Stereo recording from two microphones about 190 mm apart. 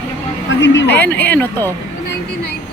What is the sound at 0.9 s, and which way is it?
Speech, 10° left (ahead or behind).